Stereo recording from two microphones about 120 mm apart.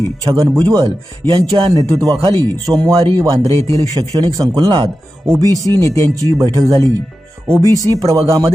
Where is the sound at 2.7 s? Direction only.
30° right (ahead or behind).